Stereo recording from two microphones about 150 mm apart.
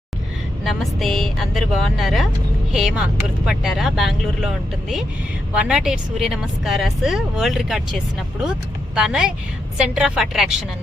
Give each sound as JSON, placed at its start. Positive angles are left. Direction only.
{"t": 0.6, "sound": "speech", "side_deg": 0}